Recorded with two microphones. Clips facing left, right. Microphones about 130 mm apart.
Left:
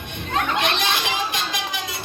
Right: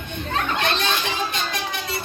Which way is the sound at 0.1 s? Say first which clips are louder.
Left 1 dB; 85° left.